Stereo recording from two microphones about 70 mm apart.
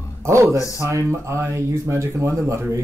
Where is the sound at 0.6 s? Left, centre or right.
Left.